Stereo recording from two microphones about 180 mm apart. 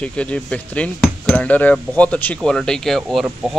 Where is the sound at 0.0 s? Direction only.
5° left (ahead or behind).